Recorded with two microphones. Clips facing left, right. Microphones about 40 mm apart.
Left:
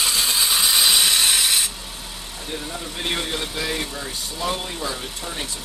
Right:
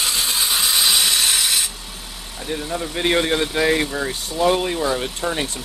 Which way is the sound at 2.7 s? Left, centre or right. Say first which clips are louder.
Right 8 dB; right.